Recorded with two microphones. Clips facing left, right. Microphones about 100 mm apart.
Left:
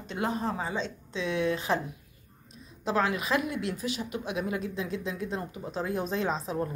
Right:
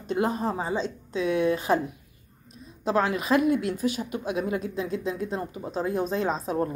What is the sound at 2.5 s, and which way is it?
A woman's voice, 35° right (ahead or behind).